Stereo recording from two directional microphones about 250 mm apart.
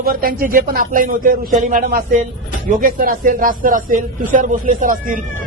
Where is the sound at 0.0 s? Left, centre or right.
Right.